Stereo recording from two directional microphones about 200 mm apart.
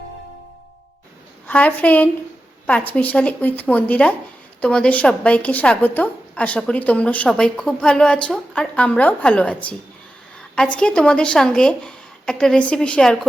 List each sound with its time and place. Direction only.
1.5 s a woman's voice: 5° left (ahead or behind)